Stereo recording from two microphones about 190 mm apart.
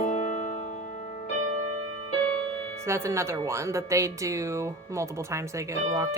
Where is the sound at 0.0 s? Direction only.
40° left (ahead or behind).